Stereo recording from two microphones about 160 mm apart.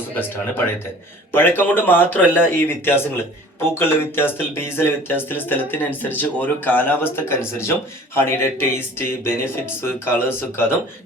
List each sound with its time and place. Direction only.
0.2 s speech: 10° left (ahead or behind)